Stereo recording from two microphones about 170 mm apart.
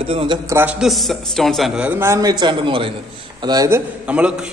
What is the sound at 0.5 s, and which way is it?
A man's voice, 10° right (ahead or behind).